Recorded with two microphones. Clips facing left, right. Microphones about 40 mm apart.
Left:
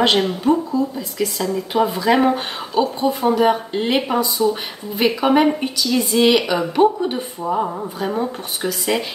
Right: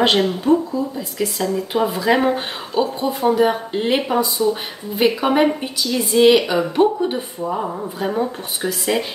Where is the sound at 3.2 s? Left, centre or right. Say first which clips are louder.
Right 2 dB; centre.